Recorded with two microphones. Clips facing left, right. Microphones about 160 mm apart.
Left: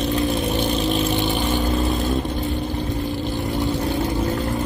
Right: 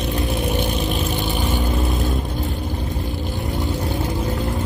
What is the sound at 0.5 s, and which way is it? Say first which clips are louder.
Vehicle: left 2 dB; 10° right (ahead or behind).